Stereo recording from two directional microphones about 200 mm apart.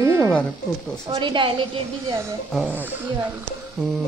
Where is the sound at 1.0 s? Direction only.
25° right (ahead or behind).